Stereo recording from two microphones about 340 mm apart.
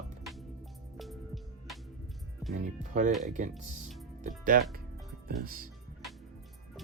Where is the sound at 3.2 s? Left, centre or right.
Right.